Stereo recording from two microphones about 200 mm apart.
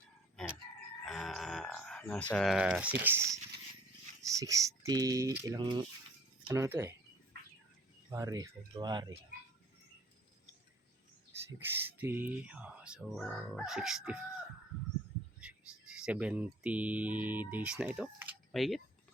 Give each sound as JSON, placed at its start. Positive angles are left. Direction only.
{"t": 1.0, "sound": "a sound", "side_deg": 0}
{"t": 4.4, "sound": "speech", "side_deg": -15}
{"t": 8.1, "sound": "speech", "side_deg": -15}
{"t": 11.3, "sound": "speech", "side_deg": -10}
{"t": 15.4, "sound": "speech", "side_deg": -5}